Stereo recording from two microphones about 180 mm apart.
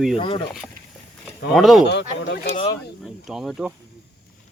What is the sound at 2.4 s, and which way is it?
Speech, 30° left (ahead or behind).